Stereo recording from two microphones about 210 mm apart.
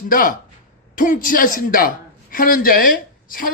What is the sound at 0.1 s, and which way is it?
A man's voice, 40° left (ahead or behind).